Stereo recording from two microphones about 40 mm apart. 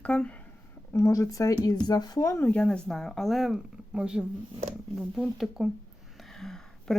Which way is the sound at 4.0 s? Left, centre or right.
Right.